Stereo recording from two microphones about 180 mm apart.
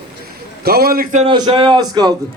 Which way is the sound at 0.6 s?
60° right (ahead or behind).